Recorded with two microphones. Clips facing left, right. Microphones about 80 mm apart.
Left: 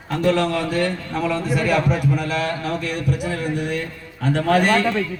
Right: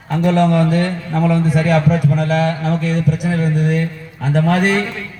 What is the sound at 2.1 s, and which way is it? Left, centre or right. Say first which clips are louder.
Speech: right 6 dB; right.